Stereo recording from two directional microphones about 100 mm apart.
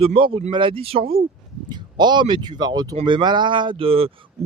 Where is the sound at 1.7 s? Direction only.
45° right (ahead or behind).